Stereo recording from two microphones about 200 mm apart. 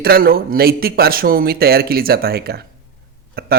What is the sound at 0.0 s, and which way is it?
Speech, 50° right (ahead or behind).